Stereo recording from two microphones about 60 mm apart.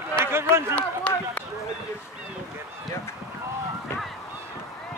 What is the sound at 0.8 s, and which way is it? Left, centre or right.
Speech, left.